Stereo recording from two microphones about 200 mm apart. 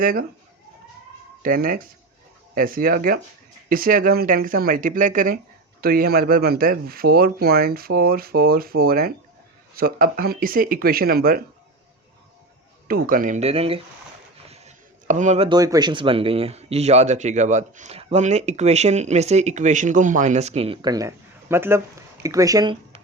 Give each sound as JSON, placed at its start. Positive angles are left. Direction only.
{"t": 0.0, "sound": "speech", "side_deg": -45}
{"t": 1.4, "sound": "speech", "side_deg": -45}
{"t": 12.9, "sound": "speech", "side_deg": -45}
{"t": 14.4, "sound": "a sound", "side_deg": -30}
{"t": 15.4, "sound": "speech", "side_deg": -20}